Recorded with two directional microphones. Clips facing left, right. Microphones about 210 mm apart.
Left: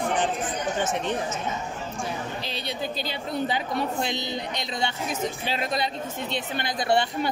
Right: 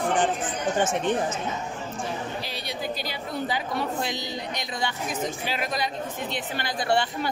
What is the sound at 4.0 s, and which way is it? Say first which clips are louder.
A woman's voice: left 2 dB; 25° left (ahead or behind).